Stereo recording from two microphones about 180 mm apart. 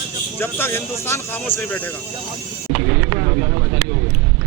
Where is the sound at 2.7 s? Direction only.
25° right (ahead or behind).